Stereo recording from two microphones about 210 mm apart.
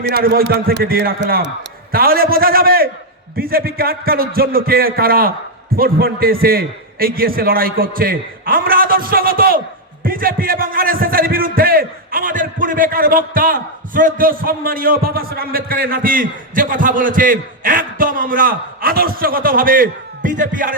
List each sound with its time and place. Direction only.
0.0 s a man's voice: 50° right (ahead or behind)